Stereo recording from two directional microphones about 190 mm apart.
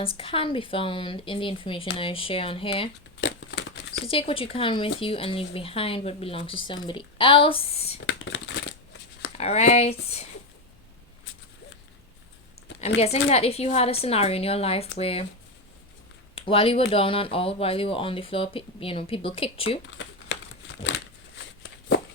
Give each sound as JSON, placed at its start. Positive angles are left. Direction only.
{"t": 0.0, "sound": "speech", "side_deg": 30}
{"t": 3.2, "sound": "a sound", "side_deg": 70}
{"t": 4.0, "sound": "speech", "side_deg": 30}
{"t": 8.0, "sound": "shuffling cards", "side_deg": 70}
{"t": 9.4, "sound": "a woman's voice", "side_deg": 35}
{"t": 13.0, "sound": "a woman's voice", "side_deg": 35}
{"t": 16.3, "sound": "speech", "side_deg": 30}
{"t": 20.0, "sound": "crumpling", "side_deg": 70}
{"t": 20.8, "sound": "a sound", "side_deg": 70}